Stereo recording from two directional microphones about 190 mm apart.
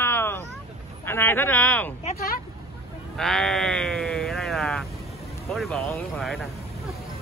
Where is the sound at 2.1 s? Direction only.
50° left (ahead or behind).